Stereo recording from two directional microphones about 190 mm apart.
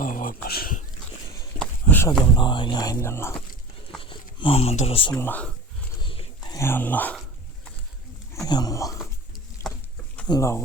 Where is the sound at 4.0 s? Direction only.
25° left (ahead or behind).